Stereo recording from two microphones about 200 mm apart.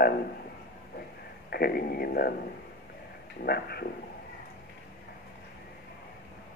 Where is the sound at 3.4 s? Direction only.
50° left (ahead or behind).